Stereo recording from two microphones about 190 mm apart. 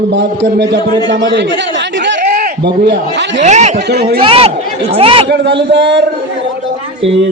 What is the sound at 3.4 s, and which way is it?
Speech, 35° right (ahead or behind).